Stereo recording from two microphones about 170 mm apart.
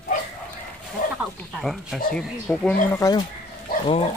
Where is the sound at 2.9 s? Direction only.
20° left (ahead or behind).